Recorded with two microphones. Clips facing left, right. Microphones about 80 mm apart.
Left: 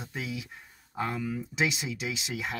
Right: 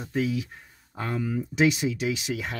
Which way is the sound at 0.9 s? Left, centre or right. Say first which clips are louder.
Right 1 dB; centre.